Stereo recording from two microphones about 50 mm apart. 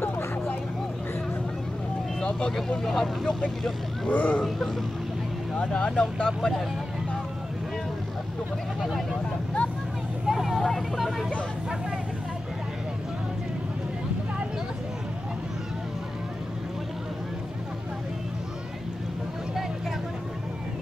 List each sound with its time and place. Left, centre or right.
2.1 s speech: centre
4.1 s speech: left
5.6 s speech: centre
10.2 s vehicle: centre
11.0 s speech: centre